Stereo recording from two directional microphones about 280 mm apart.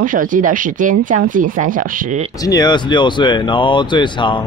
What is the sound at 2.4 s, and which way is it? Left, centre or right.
Speech, centre.